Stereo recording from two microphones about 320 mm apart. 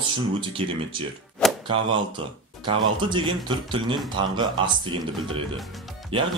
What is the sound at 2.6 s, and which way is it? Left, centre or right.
Speech, centre.